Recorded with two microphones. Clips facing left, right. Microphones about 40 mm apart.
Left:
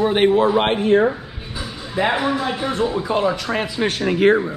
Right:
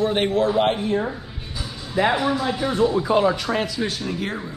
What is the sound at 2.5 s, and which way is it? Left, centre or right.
Speech, left.